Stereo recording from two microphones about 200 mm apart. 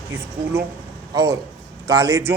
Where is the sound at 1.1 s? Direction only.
15° right (ahead or behind).